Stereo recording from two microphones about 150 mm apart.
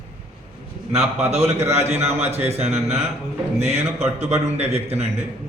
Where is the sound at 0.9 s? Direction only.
45° right (ahead or behind).